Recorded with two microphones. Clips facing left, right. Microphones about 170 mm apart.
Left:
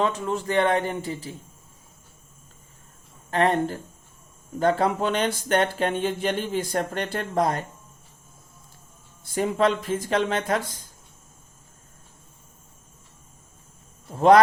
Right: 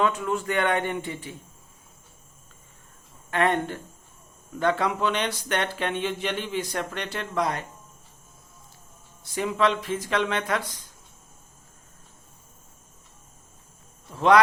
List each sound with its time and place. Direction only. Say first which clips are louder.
0.0 s a man's voice: even; 35° left (ahead or behind)
3.2 s a man's voice: left 2 dB; 35° left (ahead or behind)
9.3 s speech: left 2 dB; 45° left (ahead or behind)
14.1 s speech: left 4 dB; 45° left (ahead or behind)